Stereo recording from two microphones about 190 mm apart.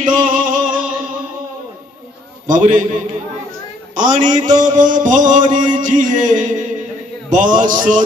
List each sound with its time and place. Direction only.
0.0 s music: 45° right (ahead or behind)
2.4 s mantra: 45° right (ahead or behind)
3.9 s a man's voice: 40° right (ahead or behind)
4.4 s mantra: 40° right (ahead or behind)